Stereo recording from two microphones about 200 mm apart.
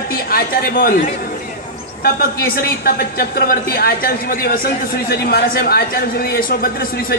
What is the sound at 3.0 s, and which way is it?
A man's voice, 50° left (ahead or behind).